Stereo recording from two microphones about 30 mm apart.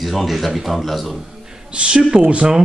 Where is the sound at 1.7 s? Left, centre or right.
Right.